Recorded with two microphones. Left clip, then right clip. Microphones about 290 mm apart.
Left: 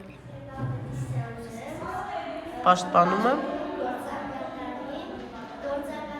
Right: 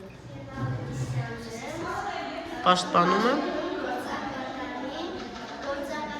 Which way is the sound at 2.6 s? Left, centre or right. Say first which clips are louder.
Left 1 dB; centre.